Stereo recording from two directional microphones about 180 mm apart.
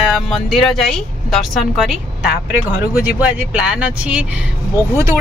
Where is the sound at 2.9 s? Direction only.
5° right (ahead or behind).